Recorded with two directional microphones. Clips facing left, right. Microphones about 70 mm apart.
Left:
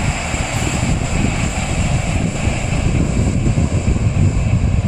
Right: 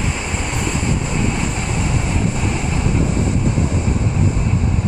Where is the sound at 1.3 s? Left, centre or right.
Right.